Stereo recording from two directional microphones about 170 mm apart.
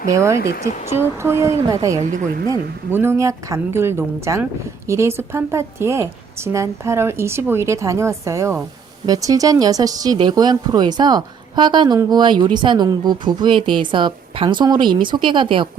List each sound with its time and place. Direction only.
0.1 s a woman's voice: 15° right (ahead or behind)
0.3 s speech: 70° left (ahead or behind)
0.9 s a woman's voice: 15° right (ahead or behind)
2.0 s speech: 50° right (ahead or behind)
2.5 s a woman's voice: 15° right (ahead or behind); by 15.7 s 30° right (ahead or behind)